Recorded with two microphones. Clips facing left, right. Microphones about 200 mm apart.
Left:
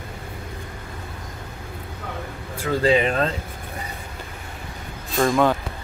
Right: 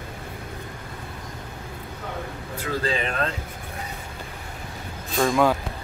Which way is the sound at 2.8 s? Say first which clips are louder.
Left 9 dB; 30° left (ahead or behind).